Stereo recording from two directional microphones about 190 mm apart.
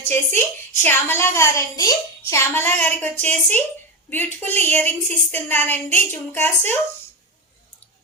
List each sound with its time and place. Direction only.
0.1 s a woman's voice: 10° left (ahead or behind)